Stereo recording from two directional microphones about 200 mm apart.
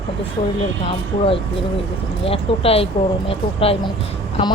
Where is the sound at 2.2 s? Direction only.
30° left (ahead or behind).